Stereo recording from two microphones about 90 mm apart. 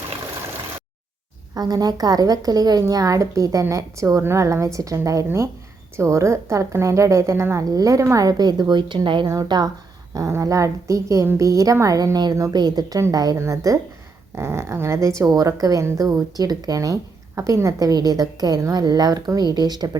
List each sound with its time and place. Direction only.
1.5 s speech: 45° right (ahead or behind); by 9.2 s 65° right (ahead or behind)
9.2 s a woman's voice: 45° right (ahead or behind)